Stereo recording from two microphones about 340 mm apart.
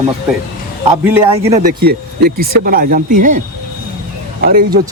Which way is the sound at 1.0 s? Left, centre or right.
Centre.